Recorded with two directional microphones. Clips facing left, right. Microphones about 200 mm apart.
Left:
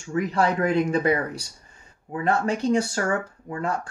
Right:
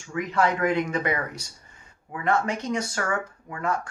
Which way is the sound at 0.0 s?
35° left (ahead or behind).